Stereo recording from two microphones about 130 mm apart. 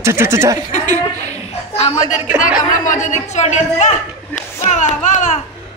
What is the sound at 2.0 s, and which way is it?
A woman's voice, 80° left.